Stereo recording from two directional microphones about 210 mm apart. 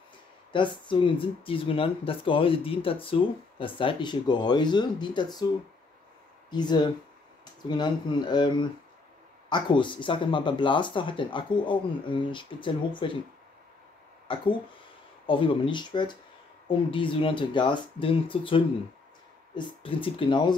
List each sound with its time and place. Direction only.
0.5 s speech: 25° left (ahead or behind)
6.5 s speech: 20° left (ahead or behind)
14.3 s speech: 25° left (ahead or behind)